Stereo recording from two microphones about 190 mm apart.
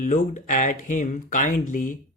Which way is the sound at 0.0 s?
40° left (ahead or behind).